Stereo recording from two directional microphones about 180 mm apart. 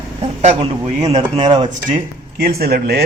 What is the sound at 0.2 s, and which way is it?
Speech, 35° right (ahead or behind).